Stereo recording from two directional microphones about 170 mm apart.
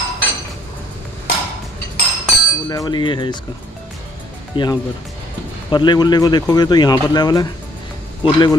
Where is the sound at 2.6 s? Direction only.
25° left (ahead or behind).